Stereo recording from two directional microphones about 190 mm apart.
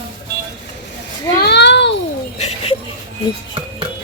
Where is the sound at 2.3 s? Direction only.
35° left (ahead or behind).